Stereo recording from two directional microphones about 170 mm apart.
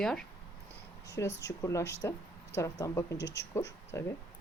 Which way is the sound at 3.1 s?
90° left.